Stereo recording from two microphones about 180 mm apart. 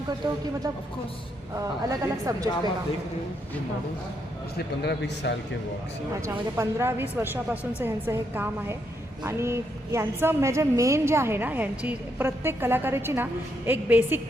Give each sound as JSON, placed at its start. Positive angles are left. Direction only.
{"t": 1.5, "sound": "speech", "side_deg": -20}
{"t": 4.5, "sound": "a man's voice", "side_deg": 65}
{"t": 6.6, "sound": "a woman's voice", "side_deg": -15}